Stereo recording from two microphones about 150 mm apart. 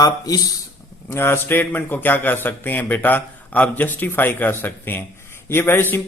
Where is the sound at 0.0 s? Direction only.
25° left (ahead or behind).